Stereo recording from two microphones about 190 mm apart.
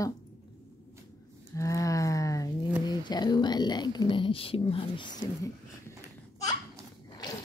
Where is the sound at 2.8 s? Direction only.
20° left (ahead or behind).